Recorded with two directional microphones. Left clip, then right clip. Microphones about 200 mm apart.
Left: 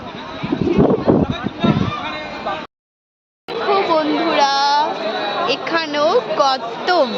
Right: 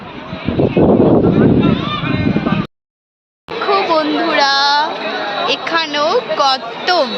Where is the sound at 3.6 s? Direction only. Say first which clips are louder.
Right 2 dB; 10° right (ahead or behind).